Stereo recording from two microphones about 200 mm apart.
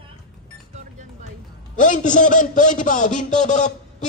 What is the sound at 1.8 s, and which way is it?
A man's voice, 40° left (ahead or behind).